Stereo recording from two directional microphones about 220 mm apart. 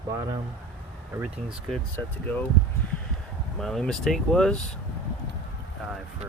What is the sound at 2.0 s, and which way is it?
Speech, 10° left (ahead or behind).